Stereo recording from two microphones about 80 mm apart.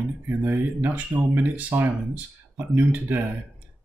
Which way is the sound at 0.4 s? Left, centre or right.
Right.